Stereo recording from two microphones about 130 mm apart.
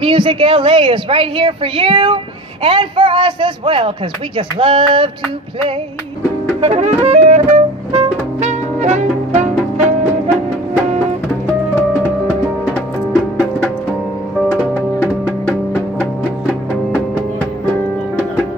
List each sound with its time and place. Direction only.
0.0 s a woman's voice: 40° right (ahead or behind)
6.6 s music: 60° right (ahead or behind)
14.6 s music: 10° right (ahead or behind)